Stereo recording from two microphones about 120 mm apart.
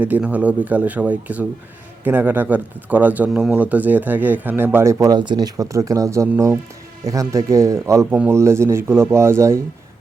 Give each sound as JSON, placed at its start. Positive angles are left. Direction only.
{"t": 0.0, "sound": "speech", "side_deg": -15}